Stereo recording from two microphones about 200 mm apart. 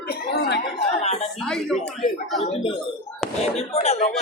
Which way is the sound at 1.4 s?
5° left (ahead or behind).